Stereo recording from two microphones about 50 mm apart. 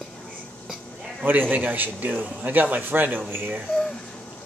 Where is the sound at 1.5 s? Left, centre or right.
Right.